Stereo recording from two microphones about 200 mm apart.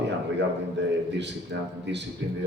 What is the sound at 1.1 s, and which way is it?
Speech, 60° right (ahead or behind).